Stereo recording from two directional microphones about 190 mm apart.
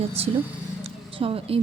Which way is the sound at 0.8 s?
30° right (ahead or behind).